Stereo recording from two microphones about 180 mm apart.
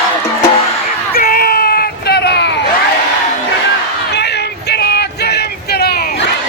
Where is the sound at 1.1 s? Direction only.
55° left (ahead or behind).